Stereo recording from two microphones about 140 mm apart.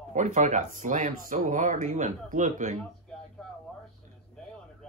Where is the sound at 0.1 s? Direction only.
60° right (ahead or behind).